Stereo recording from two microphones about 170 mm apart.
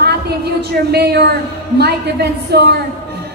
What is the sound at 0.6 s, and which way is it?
A man's voice, 70° right (ahead or behind).